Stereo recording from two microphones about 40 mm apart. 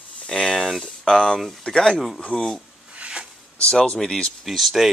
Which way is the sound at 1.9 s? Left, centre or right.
Centre.